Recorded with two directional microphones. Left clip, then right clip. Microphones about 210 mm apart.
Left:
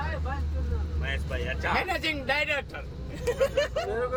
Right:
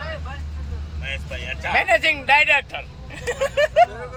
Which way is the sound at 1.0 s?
20° left (ahead or behind).